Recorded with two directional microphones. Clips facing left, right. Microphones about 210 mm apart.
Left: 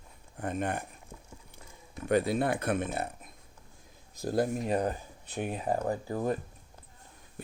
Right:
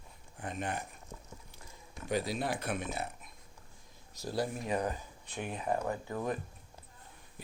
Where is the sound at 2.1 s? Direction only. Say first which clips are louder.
Left 7 dB; 55° left (ahead or behind).